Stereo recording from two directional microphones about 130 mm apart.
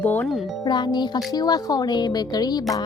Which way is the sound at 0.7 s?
35° left (ahead or behind).